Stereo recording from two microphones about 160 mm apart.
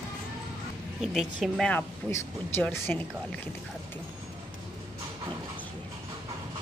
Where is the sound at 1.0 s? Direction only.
Centre (ahead or behind).